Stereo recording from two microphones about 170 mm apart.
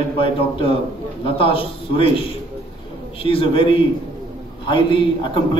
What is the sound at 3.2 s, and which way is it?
A man's voice, 30° left (ahead or behind).